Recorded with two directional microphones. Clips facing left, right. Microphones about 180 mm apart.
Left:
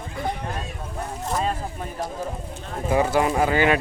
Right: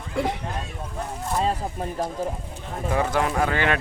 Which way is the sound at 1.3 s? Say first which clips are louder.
Right 2 dB; 30° right (ahead or behind).